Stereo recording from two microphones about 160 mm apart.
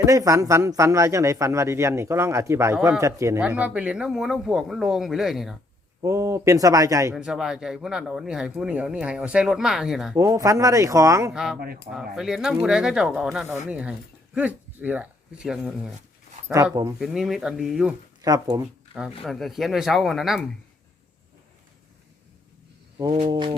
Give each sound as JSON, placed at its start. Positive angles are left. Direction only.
{"t": 0.0, "sound": "speech", "side_deg": -20}
{"t": 3.4, "sound": "speech", "side_deg": -10}
{"t": 6.0, "sound": "speech", "side_deg": -20}
{"t": 7.2, "sound": "speech", "side_deg": -5}
{"t": 10.2, "sound": "speech", "side_deg": -20}
{"t": 11.3, "sound": "speech", "side_deg": -5}
{"t": 16.5, "sound": "speech", "side_deg": -20}
{"t": 17.0, "sound": "speech", "side_deg": 0}
{"t": 18.2, "sound": "speech", "side_deg": -20}
{"t": 18.6, "sound": "speech", "side_deg": -5}
{"t": 23.0, "sound": "a sound", "side_deg": -30}
{"t": 23.3, "sound": "music", "side_deg": -30}